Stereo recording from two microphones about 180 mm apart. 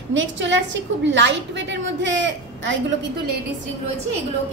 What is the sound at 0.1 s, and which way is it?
A woman's voice, 90° right.